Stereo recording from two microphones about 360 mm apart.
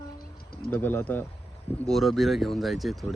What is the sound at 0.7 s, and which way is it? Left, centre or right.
Speech, centre.